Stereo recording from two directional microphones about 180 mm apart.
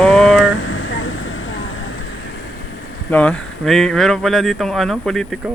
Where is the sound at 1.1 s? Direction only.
90° left.